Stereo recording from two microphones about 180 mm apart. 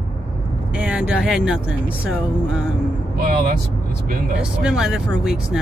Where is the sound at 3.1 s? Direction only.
55° right (ahead or behind).